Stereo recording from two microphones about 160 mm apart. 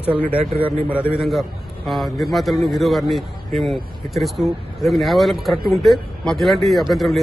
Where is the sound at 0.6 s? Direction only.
35° right (ahead or behind).